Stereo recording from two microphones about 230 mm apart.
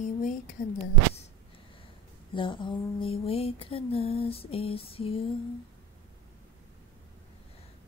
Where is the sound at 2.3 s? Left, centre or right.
Left.